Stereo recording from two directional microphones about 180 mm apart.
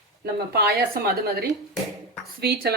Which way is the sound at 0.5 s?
60° right (ahead or behind).